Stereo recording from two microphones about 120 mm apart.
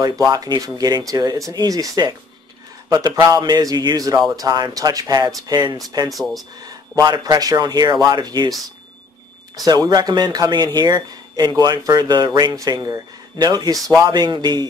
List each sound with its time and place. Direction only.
0.0 s speech: 30° right (ahead or behind)
6.1 s speech: centre (ahead or behind)
6.6 s speech: 35° right (ahead or behind)
9.7 s speech: 35° right (ahead or behind)